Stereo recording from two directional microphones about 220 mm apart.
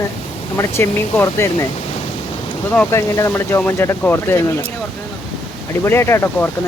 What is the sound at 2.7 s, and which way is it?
Speech, 10° left (ahead or behind).